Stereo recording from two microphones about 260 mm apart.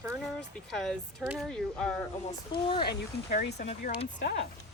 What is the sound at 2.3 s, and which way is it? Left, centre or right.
Speech, centre.